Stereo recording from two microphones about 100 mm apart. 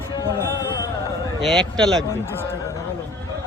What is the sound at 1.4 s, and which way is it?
Speech, 5° left (ahead or behind).